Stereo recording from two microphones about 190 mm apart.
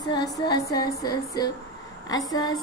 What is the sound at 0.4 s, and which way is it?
A woman's voice, 20° left (ahead or behind).